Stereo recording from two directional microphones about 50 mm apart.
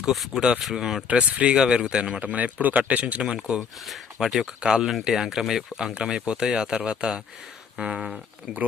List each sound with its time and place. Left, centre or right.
0.0 s speech: centre
1.0 s speech: right
2.2 s speech: right; by 3.6 s centre
3.8 s speech: centre
8.5 s speech: right